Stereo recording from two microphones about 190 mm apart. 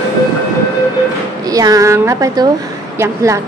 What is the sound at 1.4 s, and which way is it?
A woman's voice, 20° right (ahead or behind).